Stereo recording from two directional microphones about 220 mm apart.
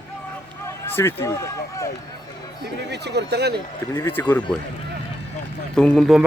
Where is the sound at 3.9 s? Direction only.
10° left (ahead or behind).